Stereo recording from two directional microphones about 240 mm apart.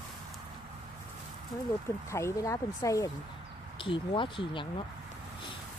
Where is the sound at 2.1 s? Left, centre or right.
Centre.